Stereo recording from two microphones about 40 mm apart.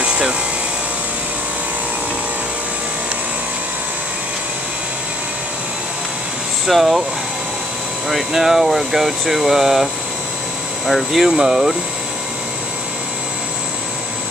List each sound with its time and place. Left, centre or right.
0.0 s a sound: right
6.6 s speech: centre
8.3 s speech: centre
10.9 s speech: centre